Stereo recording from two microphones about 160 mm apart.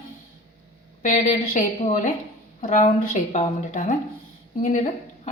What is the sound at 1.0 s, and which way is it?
A woman's voice, 50° left (ahead or behind).